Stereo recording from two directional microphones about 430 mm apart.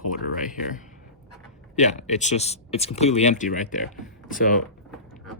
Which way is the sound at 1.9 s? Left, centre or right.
Centre.